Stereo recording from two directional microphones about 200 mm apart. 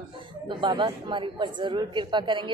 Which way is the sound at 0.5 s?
25° right (ahead or behind).